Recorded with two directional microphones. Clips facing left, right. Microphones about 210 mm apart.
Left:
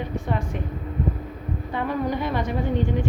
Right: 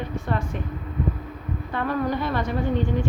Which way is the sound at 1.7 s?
15° left (ahead or behind).